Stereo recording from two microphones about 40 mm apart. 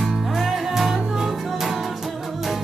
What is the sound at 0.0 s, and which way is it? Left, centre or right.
Music, centre.